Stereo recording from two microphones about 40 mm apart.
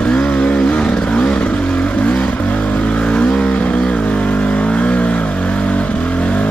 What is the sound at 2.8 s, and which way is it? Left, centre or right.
Vehicle, left.